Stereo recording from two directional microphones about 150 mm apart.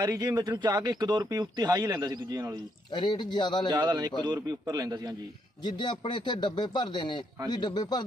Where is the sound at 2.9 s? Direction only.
30° left (ahead or behind).